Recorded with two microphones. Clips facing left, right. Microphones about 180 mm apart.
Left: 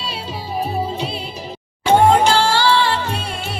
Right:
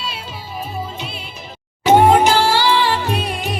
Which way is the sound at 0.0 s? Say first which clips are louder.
Left 2 dB; 35° left (ahead or behind).